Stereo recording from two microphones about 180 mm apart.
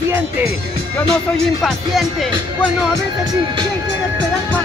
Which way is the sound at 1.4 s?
Centre (ahead or behind).